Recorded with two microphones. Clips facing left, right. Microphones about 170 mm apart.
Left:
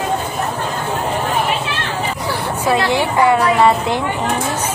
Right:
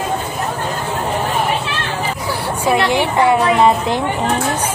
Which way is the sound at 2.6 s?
15° right (ahead or behind).